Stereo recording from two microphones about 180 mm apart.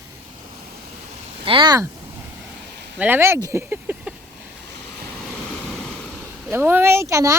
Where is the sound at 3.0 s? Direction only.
10° right (ahead or behind).